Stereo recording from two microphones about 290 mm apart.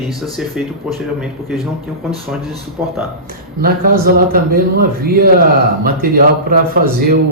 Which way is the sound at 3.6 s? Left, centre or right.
Right.